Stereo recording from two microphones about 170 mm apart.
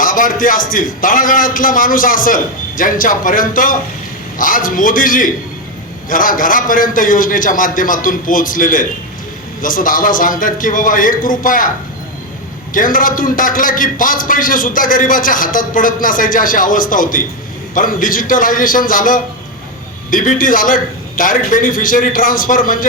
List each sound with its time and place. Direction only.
0.0 s a man's voice: 55° left (ahead or behind)
12.7 s a man's voice: 55° left (ahead or behind)